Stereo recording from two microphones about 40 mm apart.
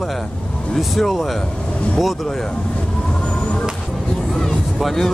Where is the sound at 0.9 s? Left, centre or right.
Centre.